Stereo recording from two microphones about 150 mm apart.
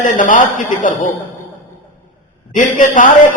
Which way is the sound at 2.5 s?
60° left (ahead or behind).